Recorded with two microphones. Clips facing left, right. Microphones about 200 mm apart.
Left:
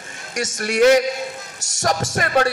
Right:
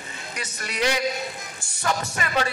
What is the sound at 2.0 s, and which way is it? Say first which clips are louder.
Music: left 7 dB; 90° left.